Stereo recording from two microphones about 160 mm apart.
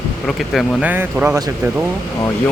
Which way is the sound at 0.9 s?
15° right (ahead or behind).